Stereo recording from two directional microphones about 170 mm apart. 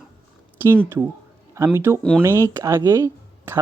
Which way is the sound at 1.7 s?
15° right (ahead or behind).